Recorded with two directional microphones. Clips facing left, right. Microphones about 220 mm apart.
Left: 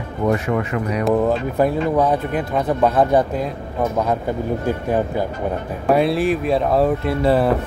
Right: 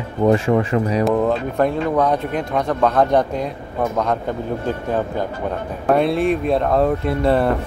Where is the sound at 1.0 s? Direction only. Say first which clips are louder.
Even; centre (ahead or behind).